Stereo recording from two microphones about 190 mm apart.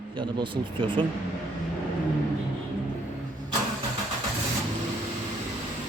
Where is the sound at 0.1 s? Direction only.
25° right (ahead or behind).